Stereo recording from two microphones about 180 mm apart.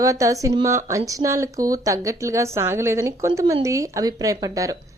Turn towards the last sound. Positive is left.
turn(degrees=-20)  # may be behind; listen again after turning